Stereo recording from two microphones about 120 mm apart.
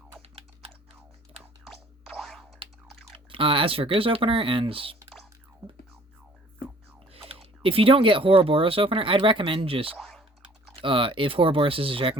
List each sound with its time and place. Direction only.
0.2 s typing: 55° right (ahead or behind)
1.6 s a sound: centre (ahead or behind)
3.2 s speech: 45° right (ahead or behind)
7.3 s speech: 50° right (ahead or behind)
9.9 s typing: 5° left (ahead or behind)
10.8 s speech: 45° right (ahead or behind)